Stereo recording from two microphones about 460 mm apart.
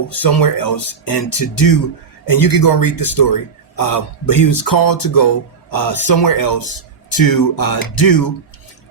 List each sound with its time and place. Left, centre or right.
0.1 s speech: left